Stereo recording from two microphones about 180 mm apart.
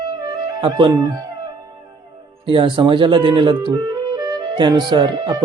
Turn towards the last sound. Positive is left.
turn(degrees=-25)  # may be behind; listen again after turning